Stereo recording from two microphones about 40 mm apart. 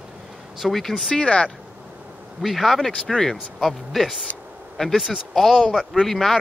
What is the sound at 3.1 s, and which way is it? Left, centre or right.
Speech, centre.